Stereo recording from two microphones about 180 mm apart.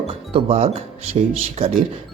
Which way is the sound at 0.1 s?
35° right (ahead or behind).